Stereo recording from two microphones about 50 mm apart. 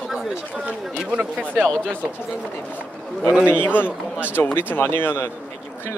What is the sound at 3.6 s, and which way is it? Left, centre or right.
Speech, left.